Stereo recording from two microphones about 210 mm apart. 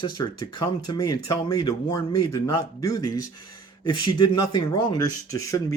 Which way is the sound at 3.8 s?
20° left (ahead or behind).